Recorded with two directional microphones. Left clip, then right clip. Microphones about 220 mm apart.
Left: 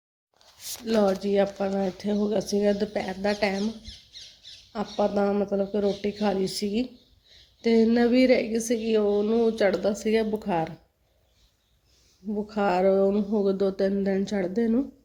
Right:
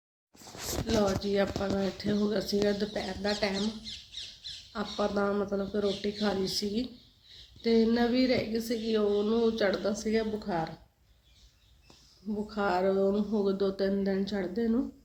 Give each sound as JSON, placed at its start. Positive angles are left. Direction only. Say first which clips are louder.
{"t": 0.9, "sound": "a woman's voice", "louder": "left 6 dB", "side_deg": 40}
{"t": 2.0, "sound": "speech", "louder": "left 4 dB", "side_deg": 25}
{"t": 2.6, "sound": "a woman's voice", "louder": "left 5 dB", "side_deg": 35}
{"t": 4.7, "sound": "a woman's voice", "louder": "left 6 dB", "side_deg": 30}
{"t": 12.5, "sound": "a woman's voice", "louder": "left 6 dB", "side_deg": 35}